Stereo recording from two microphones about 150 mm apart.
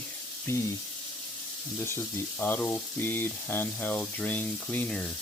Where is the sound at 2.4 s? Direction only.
10° left (ahead or behind).